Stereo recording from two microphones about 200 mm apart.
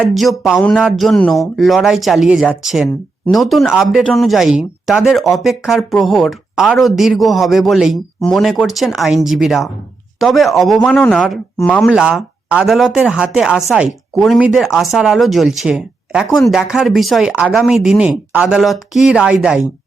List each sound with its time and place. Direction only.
0.0 s speech: centre (ahead or behind)